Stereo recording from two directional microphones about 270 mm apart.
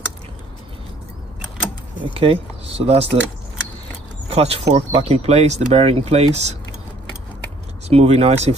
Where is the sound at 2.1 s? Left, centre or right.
Right.